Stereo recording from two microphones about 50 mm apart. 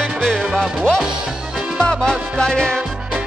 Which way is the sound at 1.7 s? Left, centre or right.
Centre.